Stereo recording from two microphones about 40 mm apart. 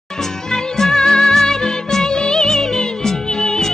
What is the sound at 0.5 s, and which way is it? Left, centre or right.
Music, centre.